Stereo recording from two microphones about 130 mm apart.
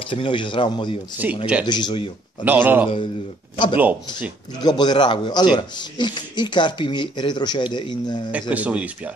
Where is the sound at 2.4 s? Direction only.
15° right (ahead or behind).